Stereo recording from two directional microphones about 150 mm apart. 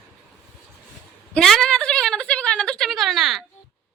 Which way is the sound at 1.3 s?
5° left (ahead or behind).